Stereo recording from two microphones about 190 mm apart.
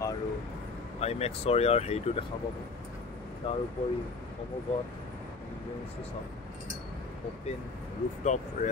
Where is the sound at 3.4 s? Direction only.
30° left (ahead or behind).